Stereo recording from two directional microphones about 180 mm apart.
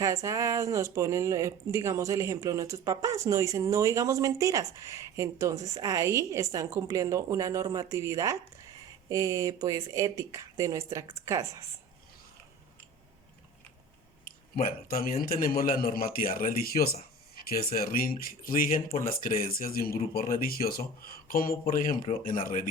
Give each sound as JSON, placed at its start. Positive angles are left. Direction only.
{"t": 0.0, "sound": "speech", "side_deg": -15}
{"t": 14.3, "sound": "a man's voice", "side_deg": 50}